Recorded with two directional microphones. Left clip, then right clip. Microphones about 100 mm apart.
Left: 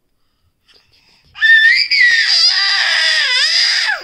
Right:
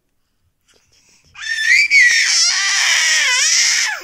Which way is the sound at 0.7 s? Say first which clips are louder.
Left 4 dB; 10° left (ahead or behind).